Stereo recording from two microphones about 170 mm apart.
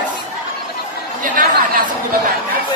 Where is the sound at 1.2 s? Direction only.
55° right (ahead or behind).